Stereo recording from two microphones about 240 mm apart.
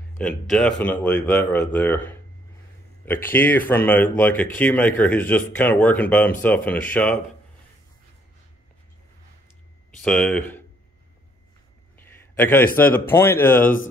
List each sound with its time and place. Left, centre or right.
0.2 s speech: centre
9.9 s speech: centre
12.0 s a man's voice: centre